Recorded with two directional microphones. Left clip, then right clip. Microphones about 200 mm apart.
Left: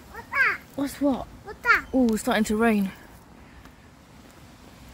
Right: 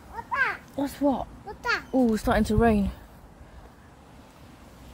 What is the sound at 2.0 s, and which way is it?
Speech, 5° left (ahead or behind).